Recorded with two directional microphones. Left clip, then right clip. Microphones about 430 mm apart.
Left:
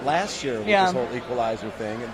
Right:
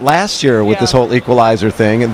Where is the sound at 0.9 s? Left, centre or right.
Right.